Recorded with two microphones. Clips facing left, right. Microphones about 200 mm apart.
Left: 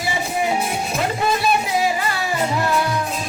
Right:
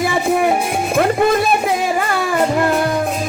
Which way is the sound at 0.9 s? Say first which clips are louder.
Right 9 dB; 55° right (ahead or behind).